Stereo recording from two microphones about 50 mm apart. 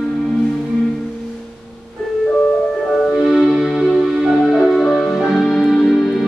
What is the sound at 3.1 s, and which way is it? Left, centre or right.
Music, centre.